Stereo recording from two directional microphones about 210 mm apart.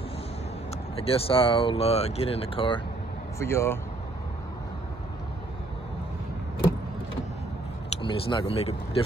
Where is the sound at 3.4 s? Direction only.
10° left (ahead or behind).